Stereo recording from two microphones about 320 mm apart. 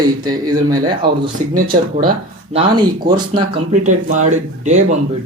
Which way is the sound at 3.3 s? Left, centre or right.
Right.